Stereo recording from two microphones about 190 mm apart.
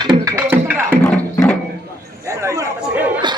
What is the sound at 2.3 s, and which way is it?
Speech, 15° right (ahead or behind).